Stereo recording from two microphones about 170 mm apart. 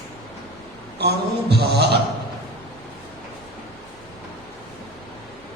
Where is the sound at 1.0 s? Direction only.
75° right (ahead or behind).